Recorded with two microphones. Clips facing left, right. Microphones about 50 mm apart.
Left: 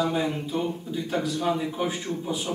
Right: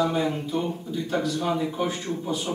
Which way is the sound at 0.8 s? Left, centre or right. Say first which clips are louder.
Right 1 dB; centre.